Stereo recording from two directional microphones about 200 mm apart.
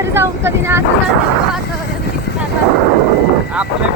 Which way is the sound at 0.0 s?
10° right (ahead or behind).